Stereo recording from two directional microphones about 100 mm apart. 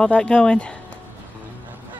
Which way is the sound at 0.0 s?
10° left (ahead or behind).